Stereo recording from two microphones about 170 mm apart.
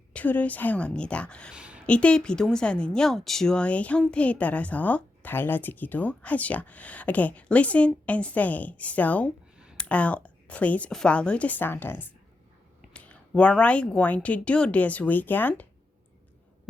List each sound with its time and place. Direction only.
0.1 s a woman's voice: 10° left (ahead or behind)
1.5 s a sound: 5° right (ahead or behind)
1.9 s a woman's voice: 5° left (ahead or behind)